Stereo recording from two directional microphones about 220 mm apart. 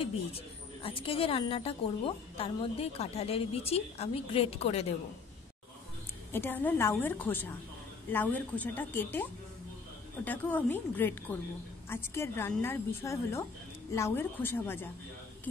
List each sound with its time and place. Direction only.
0.8 s a woman's voice: 25° left (ahead or behind)
6.3 s a woman's voice: 10° left (ahead or behind)